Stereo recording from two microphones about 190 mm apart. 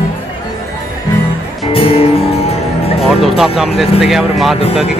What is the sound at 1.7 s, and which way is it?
Music, 30° left (ahead or behind).